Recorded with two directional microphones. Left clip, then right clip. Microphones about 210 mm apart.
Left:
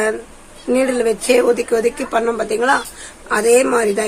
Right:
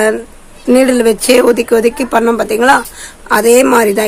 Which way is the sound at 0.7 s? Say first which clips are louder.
Right 7 dB; 35° right (ahead or behind).